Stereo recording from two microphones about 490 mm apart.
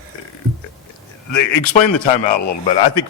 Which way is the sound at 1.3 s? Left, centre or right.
Left.